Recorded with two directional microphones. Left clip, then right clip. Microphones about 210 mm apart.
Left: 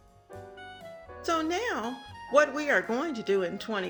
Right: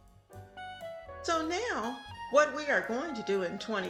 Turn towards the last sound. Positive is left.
turn(degrees=20)  # may be behind; listen again after turning